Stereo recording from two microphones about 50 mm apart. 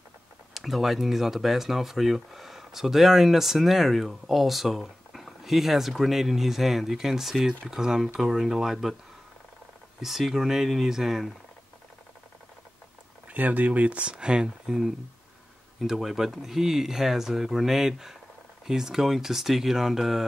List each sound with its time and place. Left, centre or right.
0.6 s speech: centre
10.0 s speech: centre
13.3 s speech: right; by 20.2 s centre